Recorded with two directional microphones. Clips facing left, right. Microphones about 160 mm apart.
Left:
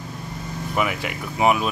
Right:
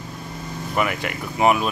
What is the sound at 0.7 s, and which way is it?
Speech, centre (ahead or behind).